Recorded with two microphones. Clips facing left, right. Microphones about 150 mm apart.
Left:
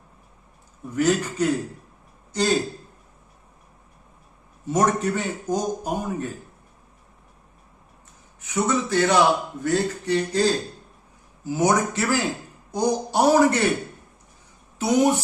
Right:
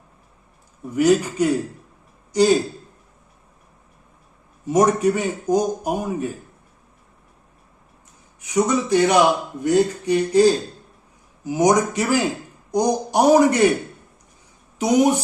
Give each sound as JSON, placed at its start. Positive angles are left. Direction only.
{"t": 0.9, "sound": "a man's voice", "side_deg": -10}
{"t": 4.6, "sound": "a man's voice", "side_deg": -10}
{"t": 8.4, "sound": "a man's voice", "side_deg": -15}
{"t": 14.8, "sound": "a man's voice", "side_deg": -15}